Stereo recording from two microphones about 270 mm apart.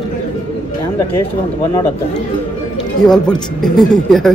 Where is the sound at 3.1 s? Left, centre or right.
Centre.